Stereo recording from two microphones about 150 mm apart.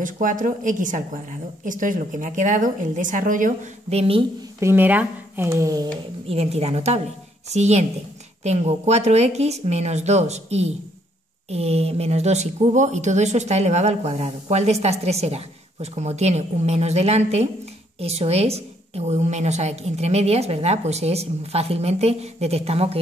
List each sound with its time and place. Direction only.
0.0 s a woman's voice: 60° right (ahead or behind)
3.9 s a woman's voice: 40° right (ahead or behind)
4.6 s speech: 15° right (ahead or behind)
6.2 s speech: 45° right (ahead or behind)